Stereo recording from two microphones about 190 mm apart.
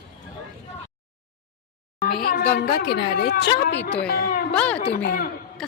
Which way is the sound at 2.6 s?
55° left (ahead or behind).